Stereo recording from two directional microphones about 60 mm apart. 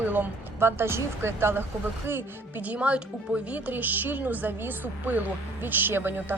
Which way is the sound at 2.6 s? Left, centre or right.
Right.